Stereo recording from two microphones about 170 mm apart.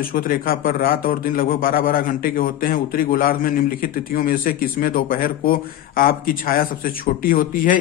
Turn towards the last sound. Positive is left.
turn(degrees=55)  # may be behind; listen again after turning